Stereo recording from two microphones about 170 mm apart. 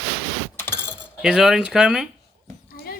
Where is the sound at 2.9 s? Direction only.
60° left (ahead or behind).